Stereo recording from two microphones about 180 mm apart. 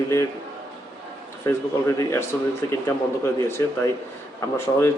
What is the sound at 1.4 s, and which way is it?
A man's voice, 15° left (ahead or behind).